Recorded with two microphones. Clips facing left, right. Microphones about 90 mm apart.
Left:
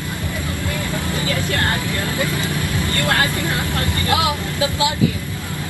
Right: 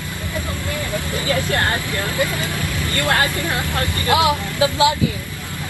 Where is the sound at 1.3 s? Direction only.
20° right (ahead or behind).